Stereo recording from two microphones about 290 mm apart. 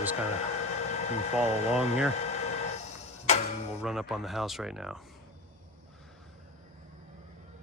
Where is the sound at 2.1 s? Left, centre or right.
Left.